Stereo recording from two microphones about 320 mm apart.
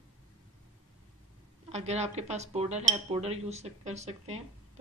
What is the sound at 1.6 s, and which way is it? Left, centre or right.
Speech, centre.